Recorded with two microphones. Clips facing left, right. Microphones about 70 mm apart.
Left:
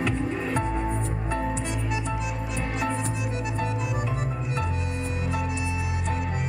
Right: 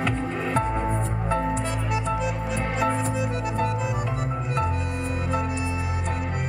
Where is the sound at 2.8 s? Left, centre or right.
Right.